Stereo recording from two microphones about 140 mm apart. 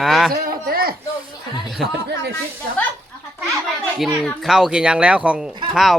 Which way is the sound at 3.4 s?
Centre (ahead or behind).